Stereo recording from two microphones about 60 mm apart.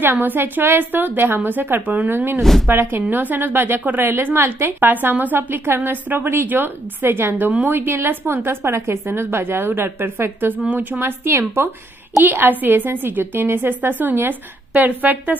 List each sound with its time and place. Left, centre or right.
0.0 s a woman's voice: right
2.4 s speech: centre
2.7 s a woman's voice: right
11.0 s a woman's voice: right
12.2 s a woman's voice: right